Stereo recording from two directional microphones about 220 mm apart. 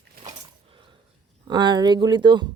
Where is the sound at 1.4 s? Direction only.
20° right (ahead or behind).